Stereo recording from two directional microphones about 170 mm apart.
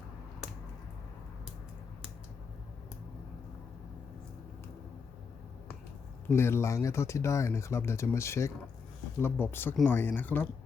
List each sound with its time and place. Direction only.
6.2 s speech: 15° left (ahead or behind)